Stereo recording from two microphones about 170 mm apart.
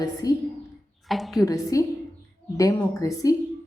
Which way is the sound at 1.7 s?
20° left (ahead or behind).